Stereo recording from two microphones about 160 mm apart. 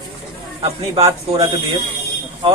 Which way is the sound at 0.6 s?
35° right (ahead or behind).